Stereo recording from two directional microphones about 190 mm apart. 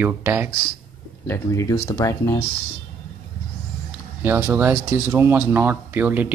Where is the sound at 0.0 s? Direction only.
10° right (ahead or behind).